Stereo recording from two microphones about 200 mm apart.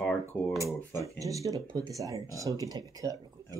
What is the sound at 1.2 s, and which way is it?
Speech, 15° right (ahead or behind).